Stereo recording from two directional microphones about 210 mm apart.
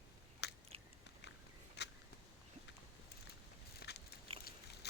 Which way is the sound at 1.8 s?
55° left (ahead or behind).